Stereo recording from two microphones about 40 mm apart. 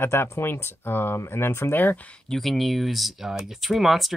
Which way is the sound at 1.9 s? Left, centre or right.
Left.